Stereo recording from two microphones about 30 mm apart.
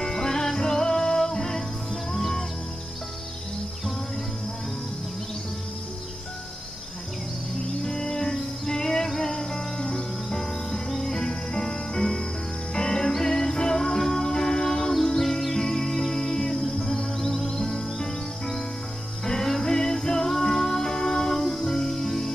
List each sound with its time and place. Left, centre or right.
0.0 s music: centre
2.1 s music: centre
7.8 s music: centre
10.3 s music: centre
13.1 s music: centre